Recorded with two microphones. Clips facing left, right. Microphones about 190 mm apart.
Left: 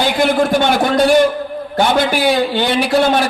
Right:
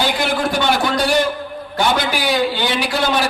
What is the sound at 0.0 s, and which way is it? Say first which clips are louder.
A man's voice: left 5 dB; 50° left (ahead or behind).